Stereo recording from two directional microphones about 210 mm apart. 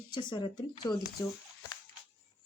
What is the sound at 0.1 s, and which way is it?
Speech, 20° left (ahead or behind).